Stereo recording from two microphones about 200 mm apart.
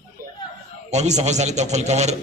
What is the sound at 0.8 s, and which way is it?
A man's voice, 35° right (ahead or behind).